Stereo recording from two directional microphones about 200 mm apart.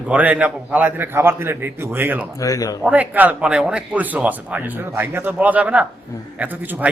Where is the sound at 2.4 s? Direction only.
15° left (ahead or behind).